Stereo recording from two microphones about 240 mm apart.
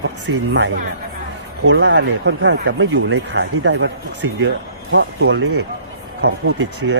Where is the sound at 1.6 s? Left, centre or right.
Right.